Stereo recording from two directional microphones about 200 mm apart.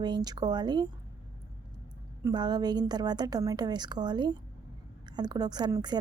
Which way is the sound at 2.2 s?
20° right (ahead or behind).